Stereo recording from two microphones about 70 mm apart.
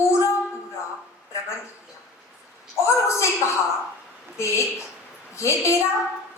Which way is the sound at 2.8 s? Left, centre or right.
Left.